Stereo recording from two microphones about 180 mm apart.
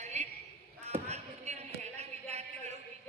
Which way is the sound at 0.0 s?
40° right (ahead or behind).